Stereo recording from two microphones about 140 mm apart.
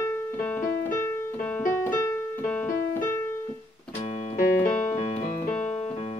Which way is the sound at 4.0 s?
55° left (ahead or behind).